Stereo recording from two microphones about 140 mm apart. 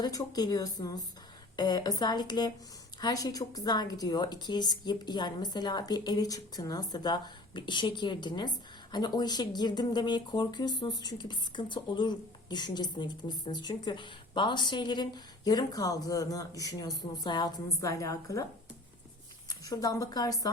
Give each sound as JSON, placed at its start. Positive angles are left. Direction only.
{"t": 0.0, "sound": "a woman's voice", "side_deg": 30}
{"t": 19.5, "sound": "a woman's voice", "side_deg": 25}